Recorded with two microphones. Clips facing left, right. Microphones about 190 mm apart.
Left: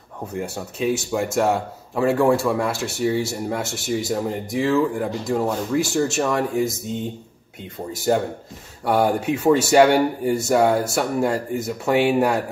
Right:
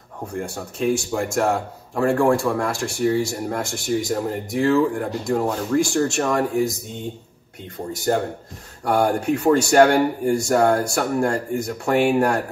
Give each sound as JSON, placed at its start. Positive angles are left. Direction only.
{"t": 0.3, "sound": "speech", "side_deg": 5}
{"t": 7.9, "sound": "speech", "side_deg": 5}